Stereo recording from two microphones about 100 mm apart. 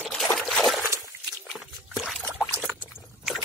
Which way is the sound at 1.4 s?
Centre (ahead or behind).